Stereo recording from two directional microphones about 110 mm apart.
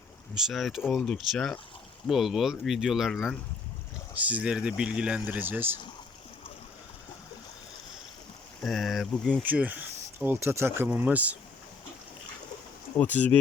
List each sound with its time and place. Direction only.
0.3 s speech: centre (ahead or behind)
0.8 s speech: 15° left (ahead or behind)
1.0 s speech: 5° left (ahead or behind)
4.2 s speech: 10° right (ahead or behind)
8.6 s speech: centre (ahead or behind)
9.4 s speech: 15° right (ahead or behind)
10.9 s speech: 15° right (ahead or behind)
13.0 s speech: 15° left (ahead or behind)